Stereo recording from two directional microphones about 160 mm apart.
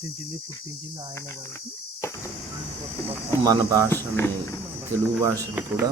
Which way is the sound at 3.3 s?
20° left (ahead or behind).